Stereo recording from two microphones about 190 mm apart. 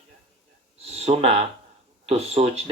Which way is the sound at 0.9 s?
35° right (ahead or behind).